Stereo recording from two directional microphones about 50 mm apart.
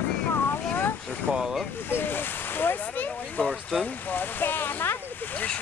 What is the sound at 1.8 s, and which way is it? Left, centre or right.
Speech, left.